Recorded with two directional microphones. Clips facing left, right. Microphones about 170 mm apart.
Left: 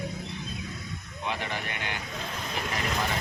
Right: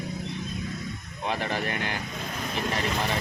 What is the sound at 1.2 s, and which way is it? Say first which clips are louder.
Speech: right 5 dB; 35° right (ahead or behind).